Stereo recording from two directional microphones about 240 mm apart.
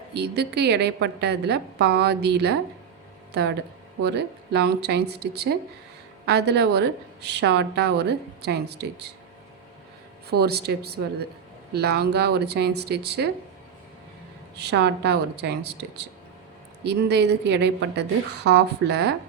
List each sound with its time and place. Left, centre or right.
0.1 s a woman's voice: right
4.0 s a woman's voice: right
10.2 s a woman's voice: right
14.5 s a woman's voice: right